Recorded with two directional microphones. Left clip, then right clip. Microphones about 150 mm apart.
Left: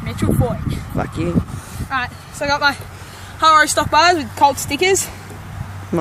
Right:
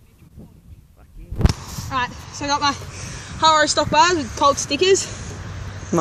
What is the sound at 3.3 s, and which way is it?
Speech, 40° left (ahead or behind).